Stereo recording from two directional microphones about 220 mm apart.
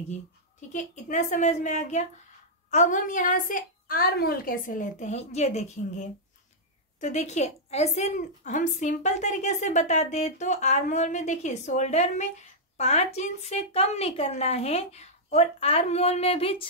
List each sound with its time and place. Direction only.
0.1 s a woman's voice: 35° left (ahead or behind)
7.0 s a woman's voice: 30° left (ahead or behind)